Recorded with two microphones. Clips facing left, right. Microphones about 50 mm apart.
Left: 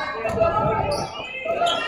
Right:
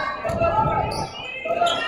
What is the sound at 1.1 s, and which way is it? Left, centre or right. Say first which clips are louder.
Basketball bounce: even; left.